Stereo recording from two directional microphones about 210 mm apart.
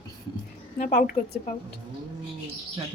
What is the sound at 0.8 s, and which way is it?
Speech, 45° left (ahead or behind).